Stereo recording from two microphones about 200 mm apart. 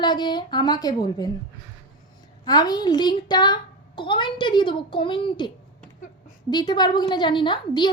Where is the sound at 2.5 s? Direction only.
20° left (ahead or behind).